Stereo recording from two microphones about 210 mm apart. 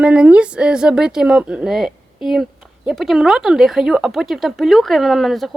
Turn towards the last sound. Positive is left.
turn(degrees=0)  # may be behind; listen again after turning